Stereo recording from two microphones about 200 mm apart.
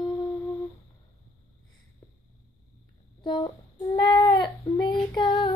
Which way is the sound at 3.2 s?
25° left (ahead or behind).